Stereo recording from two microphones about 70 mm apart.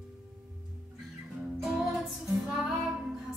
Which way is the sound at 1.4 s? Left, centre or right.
Centre.